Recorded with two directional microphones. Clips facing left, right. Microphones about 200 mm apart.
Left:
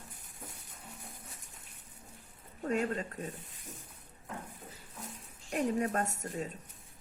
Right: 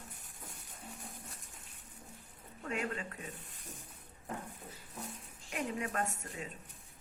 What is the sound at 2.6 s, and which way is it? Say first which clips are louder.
Speech: left 6 dB; 40° left (ahead or behind).